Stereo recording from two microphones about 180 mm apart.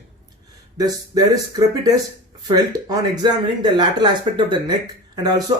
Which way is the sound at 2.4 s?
20° right (ahead or behind).